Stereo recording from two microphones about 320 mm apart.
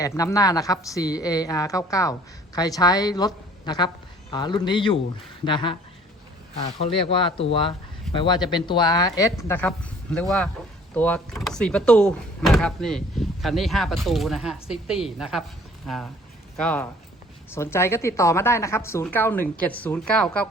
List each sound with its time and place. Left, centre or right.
0.0 s a woman's voice: centre
7.3 s a woman's voice: centre
16.6 s a woman's voice: centre